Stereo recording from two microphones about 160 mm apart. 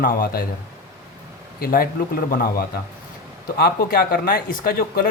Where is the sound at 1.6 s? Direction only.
65° left (ahead or behind).